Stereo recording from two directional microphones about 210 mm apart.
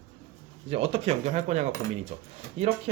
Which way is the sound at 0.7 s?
30° right (ahead or behind).